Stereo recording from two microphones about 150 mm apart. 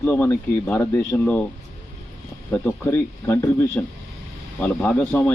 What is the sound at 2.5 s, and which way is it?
Speech, 15° left (ahead or behind).